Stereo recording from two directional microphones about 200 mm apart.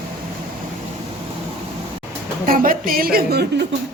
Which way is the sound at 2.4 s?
45° right (ahead or behind).